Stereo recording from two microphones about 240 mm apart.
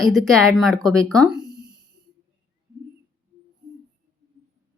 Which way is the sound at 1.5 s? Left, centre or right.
Centre.